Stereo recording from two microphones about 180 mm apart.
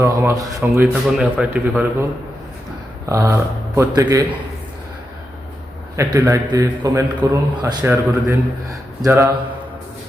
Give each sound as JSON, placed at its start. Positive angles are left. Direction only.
{"t": 0.0, "sound": "a man's voice", "side_deg": -15}
{"t": 3.1, "sound": "a man's voice", "side_deg": -15}
{"t": 6.0, "sound": "a man's voice", "side_deg": -15}